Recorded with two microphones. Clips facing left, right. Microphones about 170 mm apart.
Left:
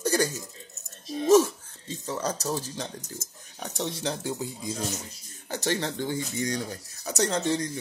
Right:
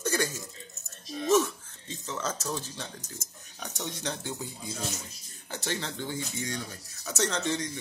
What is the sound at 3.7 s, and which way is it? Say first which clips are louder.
Speech: left 5 dB; 30° left (ahead or behind).